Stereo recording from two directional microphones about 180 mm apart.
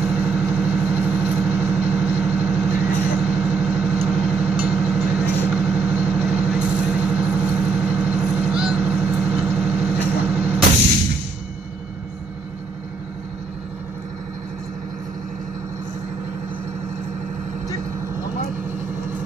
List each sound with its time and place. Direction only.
0.0 s vehicle: 5° right (ahead or behind)